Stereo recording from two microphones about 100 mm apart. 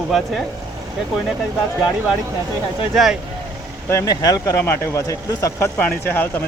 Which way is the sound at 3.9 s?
35° left (ahead or behind).